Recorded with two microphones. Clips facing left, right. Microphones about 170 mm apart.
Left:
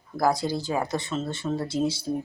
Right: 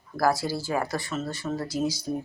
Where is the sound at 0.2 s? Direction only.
20° left (ahead or behind).